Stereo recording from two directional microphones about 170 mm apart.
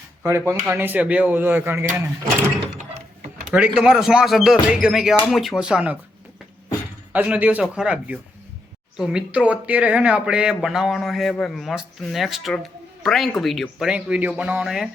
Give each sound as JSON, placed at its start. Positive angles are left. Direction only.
{"t": 0.3, "sound": "speech", "side_deg": -15}
{"t": 2.7, "sound": "a sound", "side_deg": -50}
{"t": 3.5, "sound": "speech", "side_deg": -5}
{"t": 7.1, "sound": "speech", "side_deg": -10}